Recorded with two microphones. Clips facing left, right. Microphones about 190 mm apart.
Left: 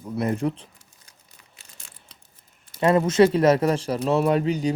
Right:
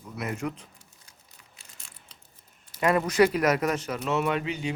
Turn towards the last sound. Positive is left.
turn(degrees=40)  # may be behind; listen again after turning